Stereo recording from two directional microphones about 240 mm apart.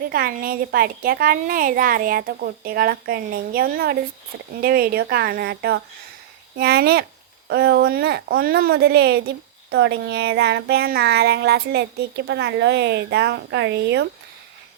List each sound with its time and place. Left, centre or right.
0.1 s a woman's voice: right